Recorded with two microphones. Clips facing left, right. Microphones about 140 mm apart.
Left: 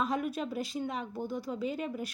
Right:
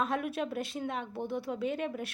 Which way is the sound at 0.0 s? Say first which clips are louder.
Even; centre (ahead or behind).